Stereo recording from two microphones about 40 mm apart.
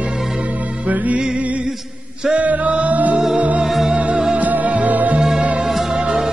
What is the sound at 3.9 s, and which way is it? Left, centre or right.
Music, right.